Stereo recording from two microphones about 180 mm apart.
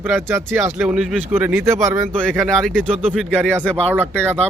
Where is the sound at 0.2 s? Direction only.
15° right (ahead or behind).